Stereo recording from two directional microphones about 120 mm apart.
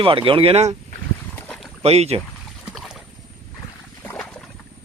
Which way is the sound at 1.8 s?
60° right (ahead or behind).